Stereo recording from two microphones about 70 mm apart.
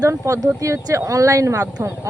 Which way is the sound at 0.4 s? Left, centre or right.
Right.